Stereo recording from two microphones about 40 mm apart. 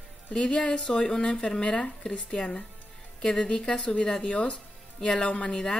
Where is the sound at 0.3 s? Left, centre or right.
Left.